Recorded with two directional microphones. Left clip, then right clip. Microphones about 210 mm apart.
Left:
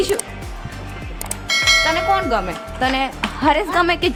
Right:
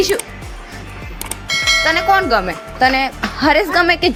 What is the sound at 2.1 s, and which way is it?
A woman's voice, 15° right (ahead or behind).